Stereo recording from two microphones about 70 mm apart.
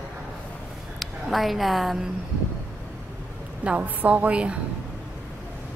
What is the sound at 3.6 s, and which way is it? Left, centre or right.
Speech, centre.